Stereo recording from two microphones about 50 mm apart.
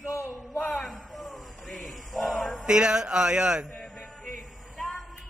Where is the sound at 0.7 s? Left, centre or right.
Centre.